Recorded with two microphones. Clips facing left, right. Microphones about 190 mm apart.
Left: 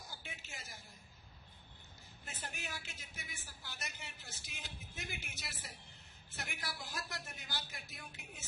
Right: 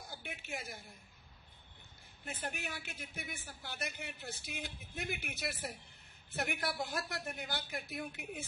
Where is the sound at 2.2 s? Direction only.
55° right (ahead or behind).